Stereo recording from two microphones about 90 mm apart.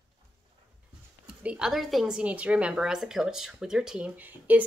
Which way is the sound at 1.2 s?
15° right (ahead or behind).